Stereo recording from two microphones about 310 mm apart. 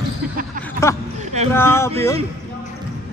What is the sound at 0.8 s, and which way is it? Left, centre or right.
Speech, centre.